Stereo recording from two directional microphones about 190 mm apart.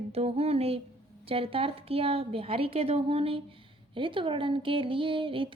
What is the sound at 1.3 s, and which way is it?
A woman's voice, 30° right (ahead or behind).